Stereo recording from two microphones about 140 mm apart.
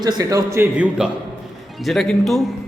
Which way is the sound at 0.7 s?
10° right (ahead or behind).